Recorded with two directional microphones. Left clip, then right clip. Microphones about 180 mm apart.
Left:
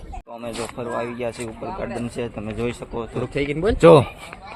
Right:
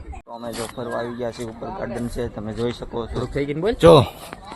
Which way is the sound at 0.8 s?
15° right (ahead or behind).